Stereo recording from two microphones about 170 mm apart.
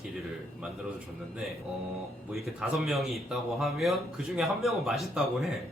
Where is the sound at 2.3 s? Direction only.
Centre (ahead or behind).